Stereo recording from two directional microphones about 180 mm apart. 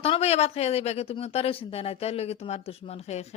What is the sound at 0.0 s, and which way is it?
Speech, 35° left (ahead or behind).